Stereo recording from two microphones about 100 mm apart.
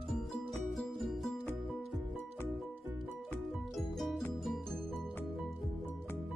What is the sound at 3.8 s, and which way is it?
Music, centre (ahead or behind).